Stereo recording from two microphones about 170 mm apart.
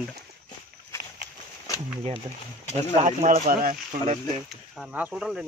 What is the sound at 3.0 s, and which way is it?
Speech, 45° right (ahead or behind).